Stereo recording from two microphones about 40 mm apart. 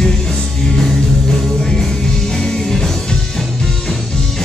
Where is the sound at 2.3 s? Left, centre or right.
Centre.